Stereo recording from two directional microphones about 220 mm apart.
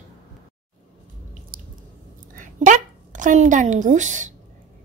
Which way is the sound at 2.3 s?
35° right (ahead or behind).